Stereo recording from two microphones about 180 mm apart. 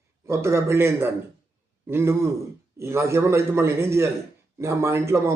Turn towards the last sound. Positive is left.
turn(degrees=-15)  # may be behind; listen again after turning